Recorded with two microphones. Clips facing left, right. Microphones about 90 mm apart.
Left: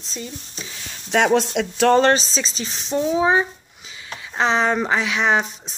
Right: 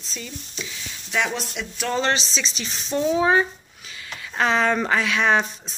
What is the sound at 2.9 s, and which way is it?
Speech, 15° left (ahead or behind).